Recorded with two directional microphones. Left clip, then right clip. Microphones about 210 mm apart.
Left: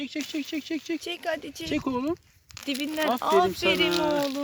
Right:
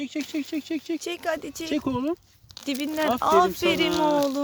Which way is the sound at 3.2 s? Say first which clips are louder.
Right 3 dB; 10° right (ahead or behind).